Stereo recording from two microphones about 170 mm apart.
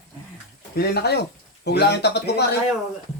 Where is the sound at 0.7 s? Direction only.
65° left (ahead or behind).